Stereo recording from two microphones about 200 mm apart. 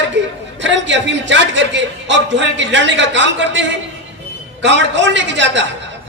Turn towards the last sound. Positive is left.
turn(degrees=-65)  # may be behind; listen again after turning